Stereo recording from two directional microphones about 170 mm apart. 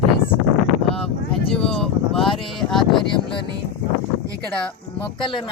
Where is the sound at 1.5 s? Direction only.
5° left (ahead or behind).